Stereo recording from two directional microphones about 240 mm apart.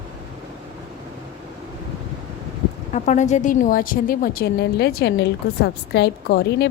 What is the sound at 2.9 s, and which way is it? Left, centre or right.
A woman's voice, left.